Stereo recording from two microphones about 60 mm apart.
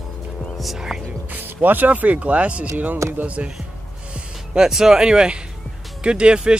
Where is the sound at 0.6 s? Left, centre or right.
Centre.